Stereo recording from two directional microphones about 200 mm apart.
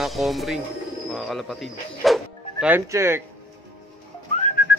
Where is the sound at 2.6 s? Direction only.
10° right (ahead or behind).